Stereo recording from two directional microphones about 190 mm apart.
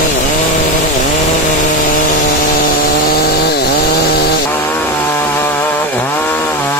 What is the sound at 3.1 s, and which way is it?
Chainsaw, 55° left (ahead or behind).